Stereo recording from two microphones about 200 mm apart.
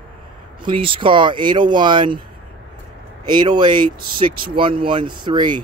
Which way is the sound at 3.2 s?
20° right (ahead or behind).